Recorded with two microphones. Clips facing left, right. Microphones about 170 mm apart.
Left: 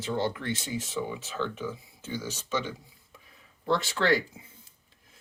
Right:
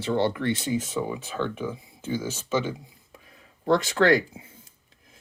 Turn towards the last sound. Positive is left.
turn(degrees=-45)  # may be behind; listen again after turning